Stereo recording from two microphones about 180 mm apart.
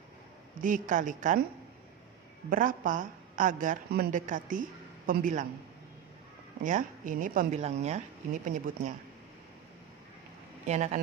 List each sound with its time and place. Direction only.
0.6 s speech: 45° right (ahead or behind)
2.5 s speech: 50° right (ahead or behind)
6.6 s speech: 45° right (ahead or behind)
7.6 s speech: 40° right (ahead or behind)
10.7 s speech: 40° right (ahead or behind)